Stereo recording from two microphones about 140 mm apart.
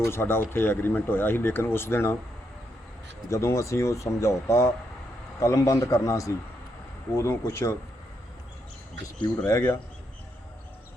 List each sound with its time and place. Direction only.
0.0 s speech: 20° left (ahead or behind)
3.2 s speech: 20° left (ahead or behind)
9.5 s speech: 20° left (ahead or behind)